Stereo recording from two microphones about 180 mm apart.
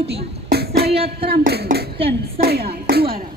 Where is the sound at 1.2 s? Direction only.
60° right (ahead or behind).